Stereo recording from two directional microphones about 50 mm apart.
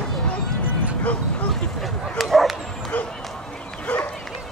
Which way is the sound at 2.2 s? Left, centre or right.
Centre.